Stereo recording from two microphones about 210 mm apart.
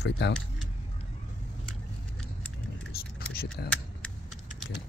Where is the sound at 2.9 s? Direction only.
45° left (ahead or behind).